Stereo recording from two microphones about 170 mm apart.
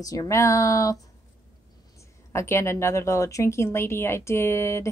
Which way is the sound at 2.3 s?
15° left (ahead or behind).